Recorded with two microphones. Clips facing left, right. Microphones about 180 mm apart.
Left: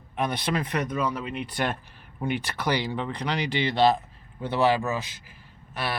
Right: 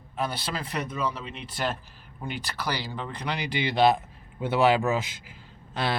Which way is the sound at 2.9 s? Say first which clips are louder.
Left 4 dB; centre (ahead or behind).